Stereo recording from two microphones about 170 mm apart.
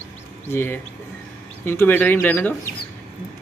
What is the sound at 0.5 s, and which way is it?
Speech, 10° left (ahead or behind).